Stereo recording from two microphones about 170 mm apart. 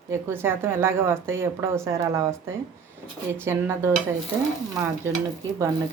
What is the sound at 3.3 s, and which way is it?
Speech, 15° right (ahead or behind).